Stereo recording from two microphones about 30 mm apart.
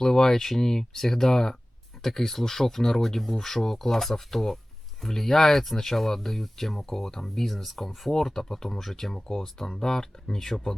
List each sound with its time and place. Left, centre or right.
0.0 s speech: centre
7.3 s speech: centre